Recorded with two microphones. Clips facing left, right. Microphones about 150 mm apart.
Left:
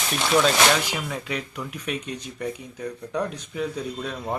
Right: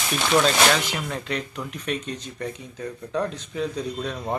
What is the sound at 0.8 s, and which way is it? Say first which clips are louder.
Speech: right 1 dB; 10° left (ahead or behind).